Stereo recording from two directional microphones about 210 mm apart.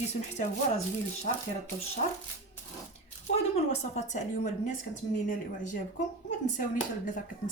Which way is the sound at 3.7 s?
35° left (ahead or behind).